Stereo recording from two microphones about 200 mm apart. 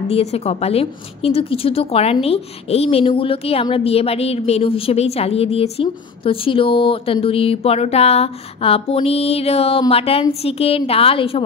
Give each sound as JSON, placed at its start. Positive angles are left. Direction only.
{"t": 0.1, "sound": "a woman's voice", "side_deg": 30}